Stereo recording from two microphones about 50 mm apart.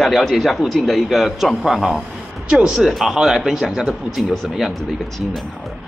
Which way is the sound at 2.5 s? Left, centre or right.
Centre.